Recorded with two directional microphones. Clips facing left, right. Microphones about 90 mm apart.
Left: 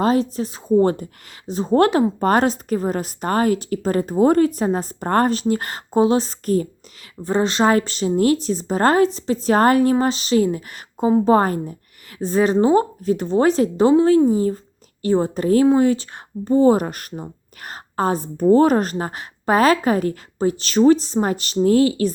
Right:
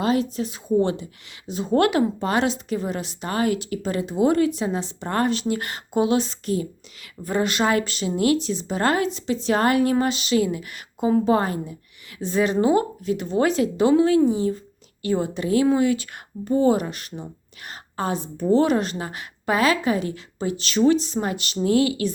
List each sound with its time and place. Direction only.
0.0 s speech: 40° left (ahead or behind)
7.2 s speech: 30° left (ahead or behind)